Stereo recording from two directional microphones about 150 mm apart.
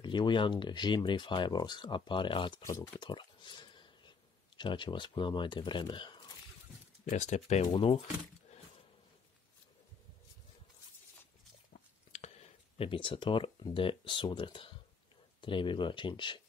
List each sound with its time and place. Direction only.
0.0 s speech: 30° left (ahead or behind)
2.6 s speech: 20° left (ahead or behind)
3.1 s whispering: 30° left (ahead or behind)
4.6 s speech: 30° left (ahead or behind)
7.1 s speech: 50° left (ahead or behind)
7.7 s speech: 35° left (ahead or behind)
12.1 s speech: 45° left (ahead or behind)